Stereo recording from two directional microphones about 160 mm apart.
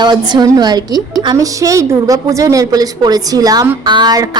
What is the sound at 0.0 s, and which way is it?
A woman's voice, 25° right (ahead or behind).